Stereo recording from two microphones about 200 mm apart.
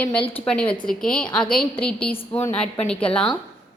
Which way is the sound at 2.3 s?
10° left (ahead or behind).